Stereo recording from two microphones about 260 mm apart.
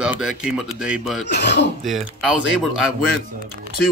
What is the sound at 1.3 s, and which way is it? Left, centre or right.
Speech, left.